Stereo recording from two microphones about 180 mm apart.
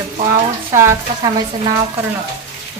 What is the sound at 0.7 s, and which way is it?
Speech, 15° right (ahead or behind).